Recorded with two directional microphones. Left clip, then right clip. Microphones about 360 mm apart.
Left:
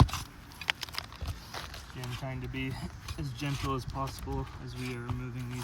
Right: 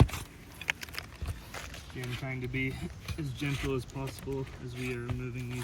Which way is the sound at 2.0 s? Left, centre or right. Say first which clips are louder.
Right 2 dB; centre.